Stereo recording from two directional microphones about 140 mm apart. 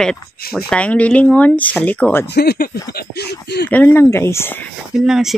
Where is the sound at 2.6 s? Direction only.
90° left.